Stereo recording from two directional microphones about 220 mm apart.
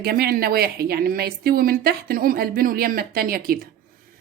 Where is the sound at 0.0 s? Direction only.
45° right (ahead or behind).